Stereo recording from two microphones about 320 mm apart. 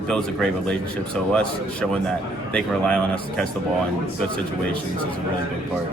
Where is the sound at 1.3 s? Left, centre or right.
Centre.